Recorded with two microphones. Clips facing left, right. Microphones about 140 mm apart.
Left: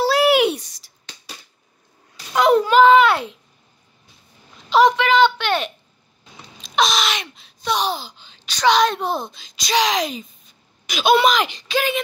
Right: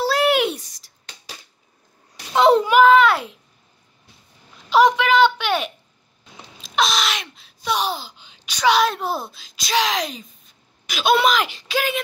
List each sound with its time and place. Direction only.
0.0 s a sound: centre (ahead or behind)
2.3 s a child's voice: 25° right (ahead or behind)
2.7 s a child's voice: 5° right (ahead or behind)
4.6 s a woman's voice: 10° right (ahead or behind)